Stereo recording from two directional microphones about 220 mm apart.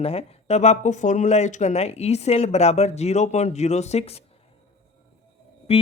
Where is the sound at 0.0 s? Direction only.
25° left (ahead or behind).